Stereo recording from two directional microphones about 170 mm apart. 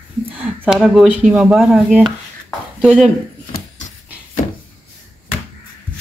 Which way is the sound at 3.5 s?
45° left (ahead or behind).